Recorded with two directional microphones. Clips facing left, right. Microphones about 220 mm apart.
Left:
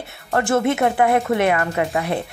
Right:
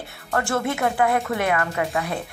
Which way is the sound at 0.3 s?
20° left (ahead or behind).